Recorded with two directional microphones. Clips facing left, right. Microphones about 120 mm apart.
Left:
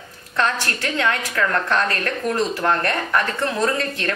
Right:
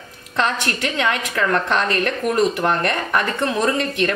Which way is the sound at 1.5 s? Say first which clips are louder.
Right 3 dB; 20° right (ahead or behind).